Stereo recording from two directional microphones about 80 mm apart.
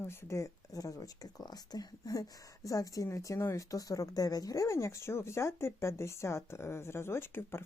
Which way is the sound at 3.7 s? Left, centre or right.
Left.